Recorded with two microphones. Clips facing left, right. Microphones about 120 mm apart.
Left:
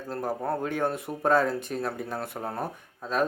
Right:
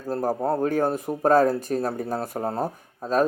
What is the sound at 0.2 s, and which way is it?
Speech, 40° right (ahead or behind).